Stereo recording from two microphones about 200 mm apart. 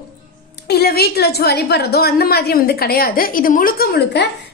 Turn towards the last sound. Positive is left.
turn(degrees=50)  # may be behind; listen again after turning